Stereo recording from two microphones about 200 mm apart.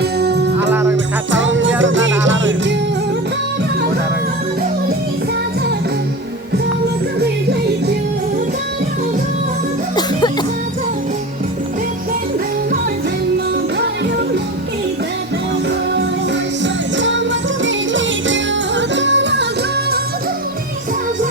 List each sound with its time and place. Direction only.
0.0 s music: 55° right (ahead or behind)
0.7 s music: 15° right (ahead or behind)
1.3 s music: 70° right (ahead or behind)
9.9 s music: 20° left (ahead or behind)
16.6 s music: 65° right (ahead or behind)